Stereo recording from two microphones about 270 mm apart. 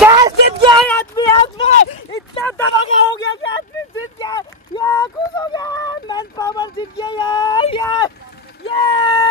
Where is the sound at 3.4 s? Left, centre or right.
Left.